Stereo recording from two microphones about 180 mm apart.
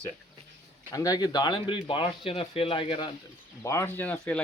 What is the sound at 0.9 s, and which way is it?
Speech, 20° left (ahead or behind).